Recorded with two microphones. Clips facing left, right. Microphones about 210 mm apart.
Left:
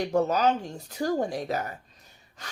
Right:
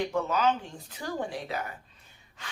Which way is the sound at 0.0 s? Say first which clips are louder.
Left 3 dB; 40° left (ahead or behind).